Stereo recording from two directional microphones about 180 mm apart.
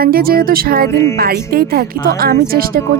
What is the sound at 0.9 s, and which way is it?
Speech, 15° left (ahead or behind).